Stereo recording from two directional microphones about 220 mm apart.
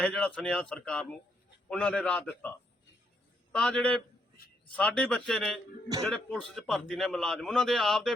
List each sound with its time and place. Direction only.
0.0 s a man's voice: 5° left (ahead or behind)
3.5 s a man's voice: centre (ahead or behind)